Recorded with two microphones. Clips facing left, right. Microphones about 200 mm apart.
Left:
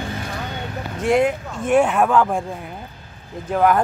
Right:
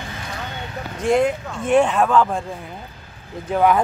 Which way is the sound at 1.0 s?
5° left (ahead or behind).